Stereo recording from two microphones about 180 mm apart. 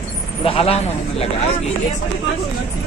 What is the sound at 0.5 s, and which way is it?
Speech, 35° left (ahead or behind).